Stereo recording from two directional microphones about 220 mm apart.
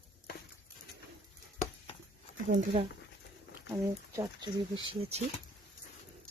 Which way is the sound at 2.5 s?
25° right (ahead or behind).